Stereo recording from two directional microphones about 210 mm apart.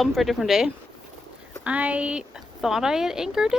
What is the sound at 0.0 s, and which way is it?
Speech, centre (ahead or behind).